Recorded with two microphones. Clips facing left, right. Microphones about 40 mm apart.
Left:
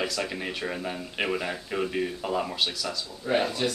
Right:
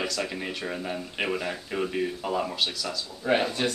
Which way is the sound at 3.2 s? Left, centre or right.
Centre.